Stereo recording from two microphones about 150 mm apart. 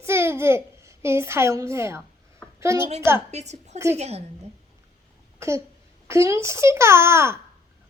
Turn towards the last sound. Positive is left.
turn(degrees=-15)  # may be behind; listen again after turning